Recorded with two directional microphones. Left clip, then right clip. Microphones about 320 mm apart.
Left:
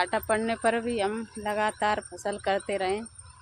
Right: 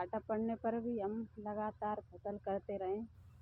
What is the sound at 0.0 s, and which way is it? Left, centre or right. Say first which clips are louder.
Speech: left 13 dB; centre.